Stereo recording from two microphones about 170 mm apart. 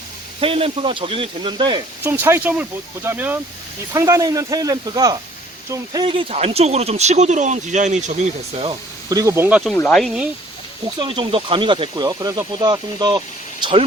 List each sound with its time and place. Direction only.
0.3 s speech: 35° right (ahead or behind)
2.0 s speech: 15° right (ahead or behind); by 8.7 s 40° right (ahead or behind)
9.0 s speech: 20° right (ahead or behind)
9.7 s speech: 5° left (ahead or behind)
11.0 s speech: 30° right (ahead or behind)